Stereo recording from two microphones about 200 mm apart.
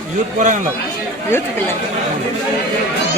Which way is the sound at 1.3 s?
10° left (ahead or behind).